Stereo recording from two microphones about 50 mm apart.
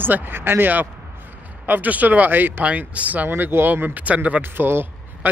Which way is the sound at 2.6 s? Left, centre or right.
Right.